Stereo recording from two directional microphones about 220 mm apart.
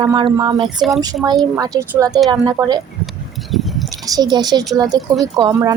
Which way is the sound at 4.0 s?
20° right (ahead or behind).